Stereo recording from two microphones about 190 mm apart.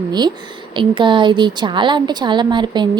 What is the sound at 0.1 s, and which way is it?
A woman's voice, 20° right (ahead or behind).